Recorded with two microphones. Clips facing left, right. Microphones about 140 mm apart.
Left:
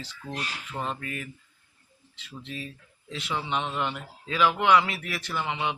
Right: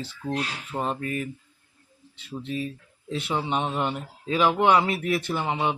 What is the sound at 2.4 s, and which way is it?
Speech, 40° right (ahead or behind).